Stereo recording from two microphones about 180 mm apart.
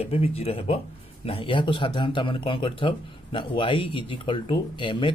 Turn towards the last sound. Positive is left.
turn(degrees=25)  # may be behind; listen again after turning